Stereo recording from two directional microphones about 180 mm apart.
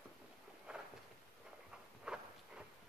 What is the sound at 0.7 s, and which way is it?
Walk, 5° right (ahead or behind).